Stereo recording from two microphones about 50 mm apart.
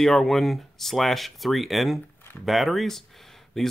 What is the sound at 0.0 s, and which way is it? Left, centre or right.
Speech, centre.